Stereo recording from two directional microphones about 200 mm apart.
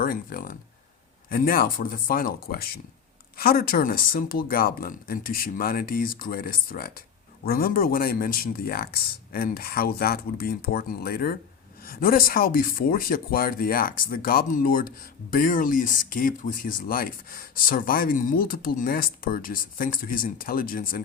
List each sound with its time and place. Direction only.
0.0 s speech: 45° left (ahead or behind)